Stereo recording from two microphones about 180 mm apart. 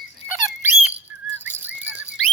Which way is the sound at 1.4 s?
10° right (ahead or behind).